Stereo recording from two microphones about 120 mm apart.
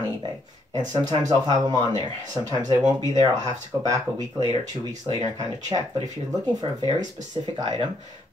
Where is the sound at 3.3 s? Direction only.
80° right.